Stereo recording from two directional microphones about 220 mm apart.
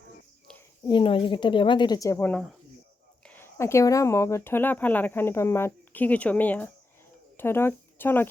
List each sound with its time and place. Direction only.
0.9 s a woman's voice: 20° left (ahead or behind)